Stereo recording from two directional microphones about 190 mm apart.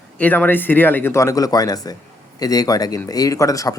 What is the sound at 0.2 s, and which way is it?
Speech, 10° left (ahead or behind).